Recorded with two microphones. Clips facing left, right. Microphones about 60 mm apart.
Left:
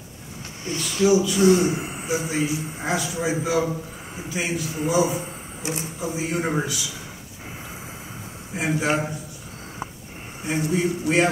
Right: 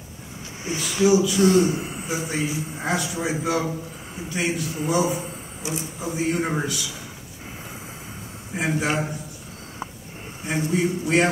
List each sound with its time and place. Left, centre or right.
0.7 s a man's voice: centre
1.4 s a man's voice: centre
2.0 s a man's voice: centre
5.6 s speech: left
5.9 s a man's voice: centre
8.5 s a man's voice: centre
10.4 s a man's voice: centre